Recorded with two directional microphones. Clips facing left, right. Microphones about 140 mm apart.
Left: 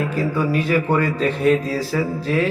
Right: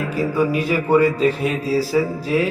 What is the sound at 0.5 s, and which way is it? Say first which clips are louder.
A man's voice: right 1 dB; 10° right (ahead or behind).